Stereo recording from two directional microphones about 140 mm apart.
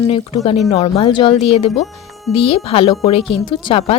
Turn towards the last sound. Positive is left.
turn(degrees=40)  # may be behind; listen again after turning